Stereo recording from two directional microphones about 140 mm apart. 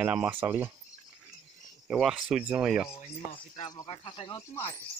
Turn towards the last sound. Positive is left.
turn(degrees=20)  # may be behind; listen again after turning